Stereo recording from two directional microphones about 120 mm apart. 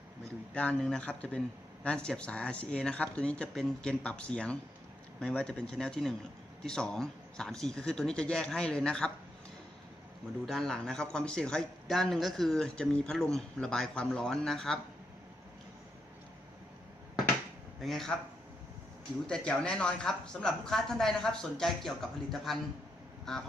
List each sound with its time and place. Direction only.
0.5 s speech: 10° left (ahead or behind)
10.4 s speech: centre (ahead or behind)
17.7 s speech: centre (ahead or behind)
19.3 s speech: 5° left (ahead or behind)